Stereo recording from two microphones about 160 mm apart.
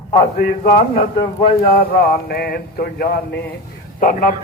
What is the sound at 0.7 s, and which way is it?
Speech, 60° left (ahead or behind).